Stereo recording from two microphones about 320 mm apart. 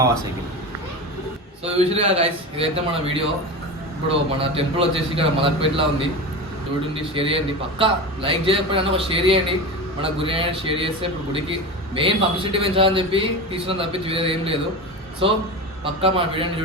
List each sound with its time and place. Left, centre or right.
1.6 s a man's voice: centre
4.4 s a man's voice: centre